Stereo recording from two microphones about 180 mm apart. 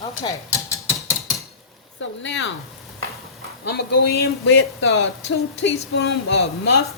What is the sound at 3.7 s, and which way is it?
A woman's voice, 65° left (ahead or behind).